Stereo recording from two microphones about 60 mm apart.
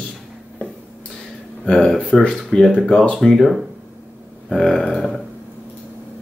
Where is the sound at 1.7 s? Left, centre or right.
Centre.